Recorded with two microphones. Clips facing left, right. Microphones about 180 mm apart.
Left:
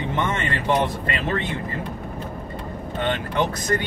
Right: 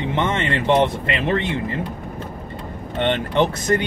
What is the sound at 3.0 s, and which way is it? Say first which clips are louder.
Speech: right 5 dB; 25° right (ahead or behind).